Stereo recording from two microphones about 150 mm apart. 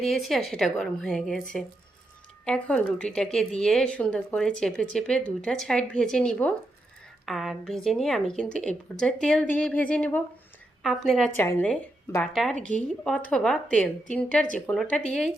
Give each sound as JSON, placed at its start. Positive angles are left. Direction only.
{"t": 0.0, "sound": "a woman's voice", "side_deg": 0}
{"t": 11.3, "sound": "a woman's voice", "side_deg": 15}